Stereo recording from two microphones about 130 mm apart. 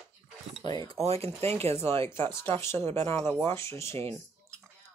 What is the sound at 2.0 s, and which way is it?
Speech, 40° right (ahead or behind).